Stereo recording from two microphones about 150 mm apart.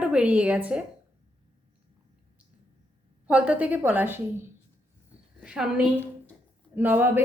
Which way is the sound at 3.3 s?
5° right (ahead or behind).